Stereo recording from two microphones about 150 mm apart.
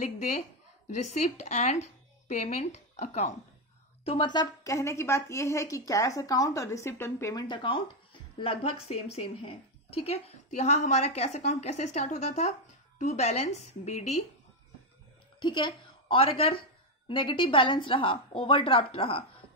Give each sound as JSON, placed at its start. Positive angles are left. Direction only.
{"t": 0.8, "sound": "speech", "side_deg": 50}
{"t": 4.0, "sound": "a woman's voice", "side_deg": 35}
{"t": 7.4, "sound": "speech", "side_deg": 30}
{"t": 15.4, "sound": "a woman's voice", "side_deg": 30}